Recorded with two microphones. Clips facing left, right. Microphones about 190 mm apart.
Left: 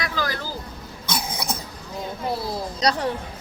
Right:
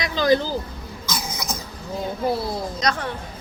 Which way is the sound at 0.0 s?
20° right (ahead or behind).